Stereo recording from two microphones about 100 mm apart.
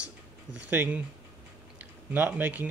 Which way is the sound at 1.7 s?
15° right (ahead or behind).